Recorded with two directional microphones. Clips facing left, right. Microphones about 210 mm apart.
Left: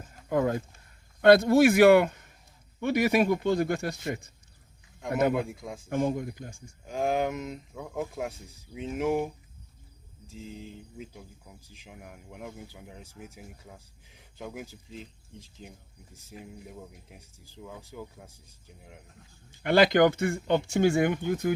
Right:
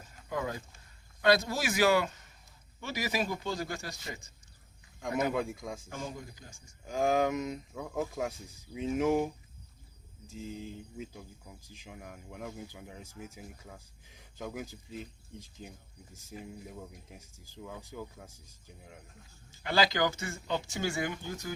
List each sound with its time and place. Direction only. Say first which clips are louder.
0.0 s a sound: left 9 dB; 50° left (ahead or behind)
1.2 s speech: left 10 dB; 60° left (ahead or behind)
5.3 s speech: left 3 dB; centre (ahead or behind)
5.9 s speech: left 13 dB; 55° left (ahead or behind)
6.9 s speech: even; centre (ahead or behind)
10.3 s speech: right 1 dB; centre (ahead or behind)
16.3 s speech: even; centre (ahead or behind)
19.5 s speech: left 8 dB; 55° left (ahead or behind)